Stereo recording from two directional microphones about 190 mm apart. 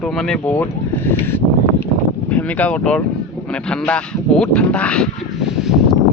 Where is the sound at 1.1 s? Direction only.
10° left (ahead or behind).